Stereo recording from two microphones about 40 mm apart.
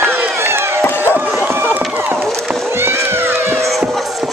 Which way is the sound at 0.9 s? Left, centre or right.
Left.